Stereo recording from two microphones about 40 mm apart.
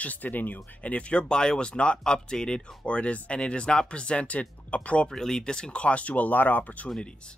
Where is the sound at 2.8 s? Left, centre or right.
Left.